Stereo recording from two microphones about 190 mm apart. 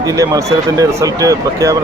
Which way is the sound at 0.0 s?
20° right (ahead or behind).